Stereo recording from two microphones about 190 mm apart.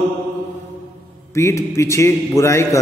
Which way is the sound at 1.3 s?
15° left (ahead or behind).